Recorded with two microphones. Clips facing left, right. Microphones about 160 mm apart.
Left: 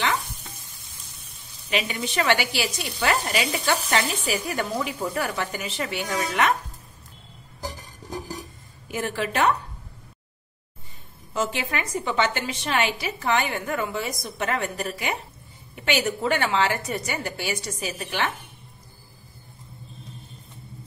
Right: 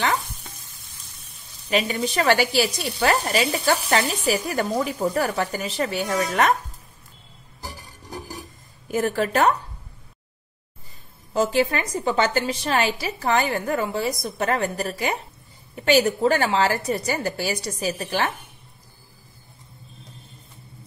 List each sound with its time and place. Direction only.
1.7 s a woman's voice: 40° right (ahead or behind)
8.9 s a woman's voice: 40° right (ahead or behind)
11.3 s a woman's voice: 35° right (ahead or behind)